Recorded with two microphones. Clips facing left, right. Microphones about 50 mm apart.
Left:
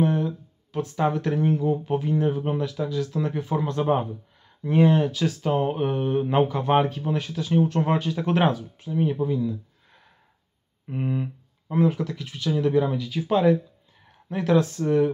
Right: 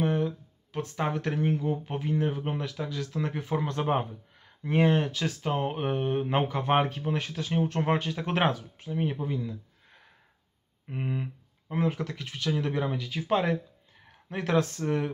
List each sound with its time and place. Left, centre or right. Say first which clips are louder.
0.0 s a sound: left 4 dB; right
0.7 s speech: left 6 dB; right
1.5 s speech: left 6 dB; right
2.8 s speech: left 6 dB; right
10.9 s a sound: left 5 dB; centre
11.8 s speech: left 6 dB; right